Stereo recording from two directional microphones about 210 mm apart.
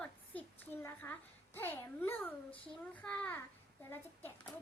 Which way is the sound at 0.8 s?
10° left (ahead or behind).